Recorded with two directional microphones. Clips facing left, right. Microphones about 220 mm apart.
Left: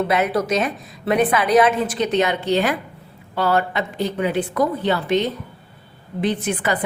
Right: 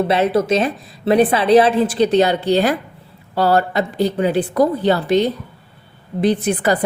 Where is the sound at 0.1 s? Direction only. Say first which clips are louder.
Right 4 dB; 30° right (ahead or behind).